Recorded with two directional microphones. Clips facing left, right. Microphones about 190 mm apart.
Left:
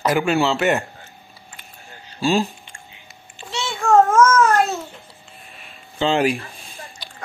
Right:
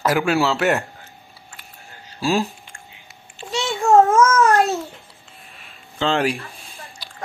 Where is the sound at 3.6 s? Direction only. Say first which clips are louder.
Right 1 dB; 15° right (ahead or behind).